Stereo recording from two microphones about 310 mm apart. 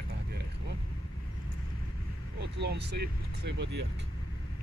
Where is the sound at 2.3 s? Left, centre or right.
Right.